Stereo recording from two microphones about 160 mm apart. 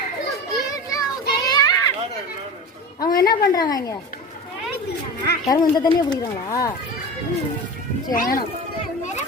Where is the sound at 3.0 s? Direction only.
25° left (ahead or behind).